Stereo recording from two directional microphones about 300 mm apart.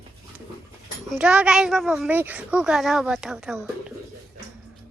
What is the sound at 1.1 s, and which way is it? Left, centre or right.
Speech, centre.